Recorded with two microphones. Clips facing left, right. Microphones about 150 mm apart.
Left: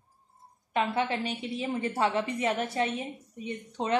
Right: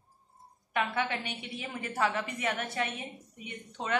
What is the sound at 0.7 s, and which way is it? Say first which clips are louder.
A woman's voice: left 3 dB; 30° left (ahead or behind).